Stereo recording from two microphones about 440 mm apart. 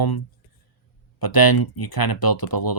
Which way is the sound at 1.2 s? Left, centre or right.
Left.